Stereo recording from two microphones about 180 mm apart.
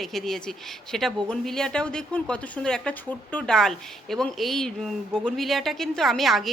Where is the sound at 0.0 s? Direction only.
Centre (ahead or behind).